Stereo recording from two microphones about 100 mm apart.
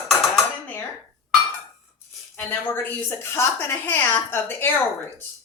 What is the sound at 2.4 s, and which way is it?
A woman's voice, 25° left (ahead or behind).